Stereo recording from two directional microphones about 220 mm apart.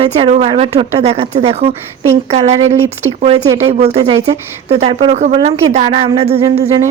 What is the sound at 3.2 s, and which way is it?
A woman's voice, 30° right (ahead or behind).